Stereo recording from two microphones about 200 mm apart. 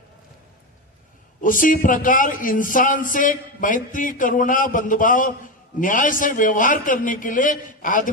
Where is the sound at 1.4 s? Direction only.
40° left (ahead or behind).